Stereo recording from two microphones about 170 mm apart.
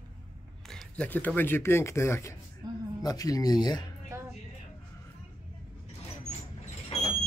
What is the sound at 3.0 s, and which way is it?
Speech, 20° left (ahead or behind).